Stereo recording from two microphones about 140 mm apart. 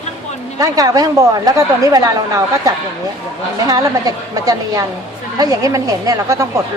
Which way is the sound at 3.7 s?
25° right (ahead or behind).